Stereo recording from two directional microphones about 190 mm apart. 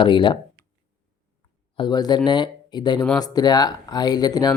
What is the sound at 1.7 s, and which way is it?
Speech, 20° left (ahead or behind).